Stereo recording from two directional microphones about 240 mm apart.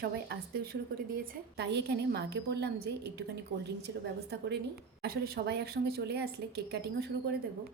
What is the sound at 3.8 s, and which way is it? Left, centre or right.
A woman's voice, right.